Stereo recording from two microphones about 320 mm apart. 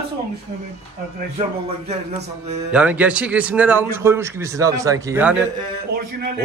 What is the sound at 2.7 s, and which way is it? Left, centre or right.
A man's voice, centre.